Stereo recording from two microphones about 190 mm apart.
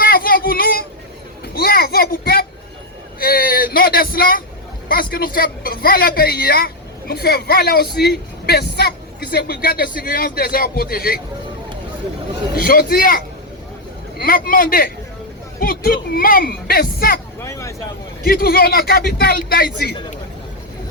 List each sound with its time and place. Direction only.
0.0 s child singing: 50° left (ahead or behind)
1.5 s a sound: 55° left (ahead or behind)
4.9 s a woman's voice: 50° left (ahead or behind)
12.5 s speech: 50° left (ahead or behind)
17.4 s speech: 15° left (ahead or behind)
18.3 s speech: 50° left (ahead or behind)